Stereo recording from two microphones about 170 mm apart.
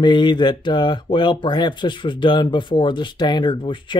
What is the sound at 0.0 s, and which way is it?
Speech, 25° left (ahead or behind).